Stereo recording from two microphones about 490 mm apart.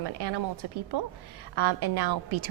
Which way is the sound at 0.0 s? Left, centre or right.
Right.